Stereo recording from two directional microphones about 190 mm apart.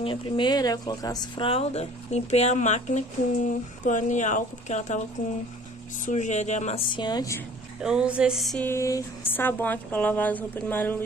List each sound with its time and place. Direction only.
0.0 s speech: 25° left (ahead or behind)
6.0 s speech: 40° left (ahead or behind)
6.9 s speech: 25° left (ahead or behind)
7.8 s music: 5° right (ahead or behind)
8.6 s speech: 15° left (ahead or behind)